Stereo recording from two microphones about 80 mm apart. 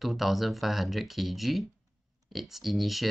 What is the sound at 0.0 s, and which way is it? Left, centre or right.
Speech, centre.